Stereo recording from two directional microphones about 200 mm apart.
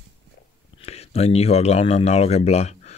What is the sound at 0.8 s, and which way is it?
Speech, 30° left (ahead or behind).